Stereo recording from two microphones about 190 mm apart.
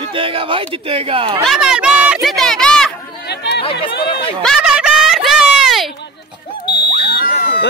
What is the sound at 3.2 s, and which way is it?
Chatter, 60° left (ahead or behind).